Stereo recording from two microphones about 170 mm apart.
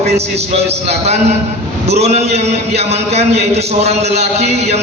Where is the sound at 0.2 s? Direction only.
40° right (ahead or behind).